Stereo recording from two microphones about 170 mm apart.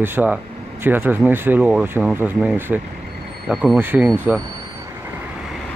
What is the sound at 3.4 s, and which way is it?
Speech, centre (ahead or behind).